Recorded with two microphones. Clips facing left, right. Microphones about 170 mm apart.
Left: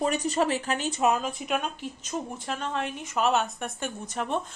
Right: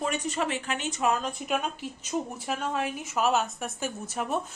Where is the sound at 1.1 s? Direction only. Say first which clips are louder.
Left 1 dB; 5° left (ahead or behind).